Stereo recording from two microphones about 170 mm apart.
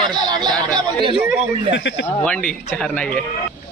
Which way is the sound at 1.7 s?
90° left.